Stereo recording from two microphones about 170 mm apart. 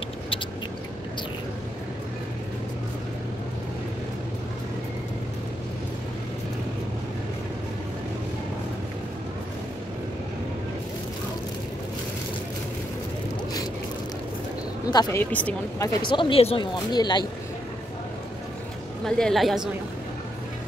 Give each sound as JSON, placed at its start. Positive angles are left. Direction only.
{"t": 14.9, "sound": "speech", "side_deg": 25}
{"t": 15.3, "sound": "speech", "side_deg": 10}
{"t": 16.0, "sound": "speech", "side_deg": 30}
{"t": 19.0, "sound": "a woman's voice", "side_deg": 5}